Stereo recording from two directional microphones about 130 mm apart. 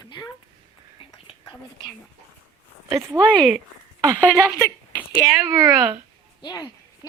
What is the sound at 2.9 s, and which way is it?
Speech, 25° right (ahead or behind).